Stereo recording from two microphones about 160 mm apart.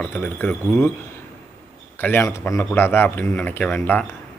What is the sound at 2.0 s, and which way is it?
Speech, 15° left (ahead or behind).